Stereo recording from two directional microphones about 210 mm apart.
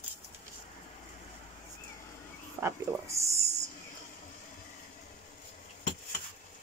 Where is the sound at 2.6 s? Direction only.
15° right (ahead or behind).